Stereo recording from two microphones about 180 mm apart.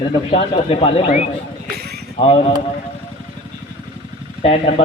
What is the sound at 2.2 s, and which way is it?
Speech, 35° left (ahead or behind).